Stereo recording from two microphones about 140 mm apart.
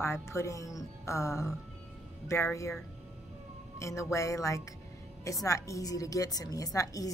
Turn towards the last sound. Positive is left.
turn(degrees=25)  # may be behind; listen again after turning